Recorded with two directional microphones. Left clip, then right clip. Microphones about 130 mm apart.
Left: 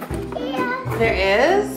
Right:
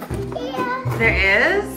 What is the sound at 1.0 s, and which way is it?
Speech, 15° left (ahead or behind).